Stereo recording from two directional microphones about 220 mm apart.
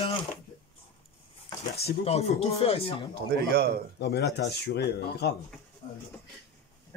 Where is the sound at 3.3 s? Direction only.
45° right (ahead or behind).